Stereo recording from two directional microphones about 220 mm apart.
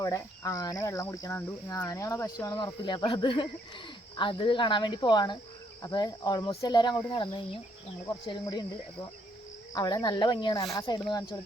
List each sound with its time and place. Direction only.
0.0 s speech: 15° left (ahead or behind)
9.7 s speech: 15° left (ahead or behind)